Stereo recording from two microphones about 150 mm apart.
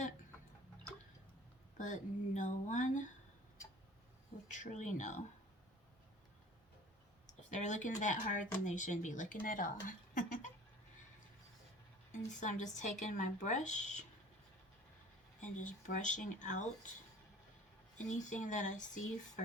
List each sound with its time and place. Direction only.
1.8 s speech: 55° left (ahead or behind)
4.5 s speech: 55° left (ahead or behind)
7.5 s speech: 55° left (ahead or behind)
12.4 s speech: 55° left (ahead or behind)
15.4 s speech: 55° left (ahead or behind)
17.9 s speech: 55° left (ahead or behind)